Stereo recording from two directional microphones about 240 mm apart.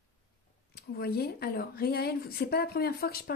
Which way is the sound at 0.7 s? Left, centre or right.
Left.